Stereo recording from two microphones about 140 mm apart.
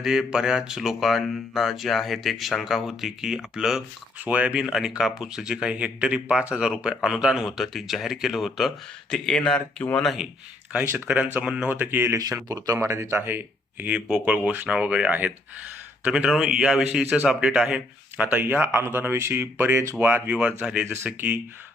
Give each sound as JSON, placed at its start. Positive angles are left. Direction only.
{"t": 0.0, "sound": "speech", "side_deg": -5}
{"t": 10.7, "sound": "a man's voice", "side_deg": -10}